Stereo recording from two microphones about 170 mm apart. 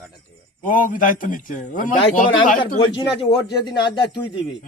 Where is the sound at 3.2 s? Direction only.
25° left (ahead or behind).